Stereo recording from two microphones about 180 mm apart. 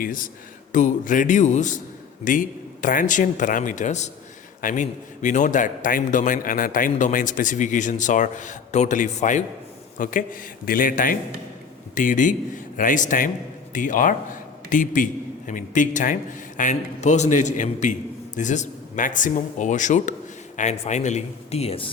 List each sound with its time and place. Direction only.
0.0 s a man's voice: 50° left (ahead or behind); by 21.8 s 35° left (ahead or behind)